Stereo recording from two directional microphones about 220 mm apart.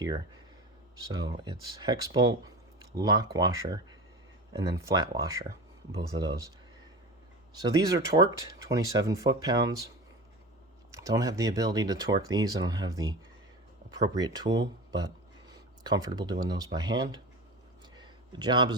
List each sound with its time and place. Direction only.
1.1 s speech: 20° right (ahead or behind)
7.6 s speech: 15° right (ahead or behind)
10.9 s speech: 15° right (ahead or behind)
17.9 s a sound: 20° right (ahead or behind)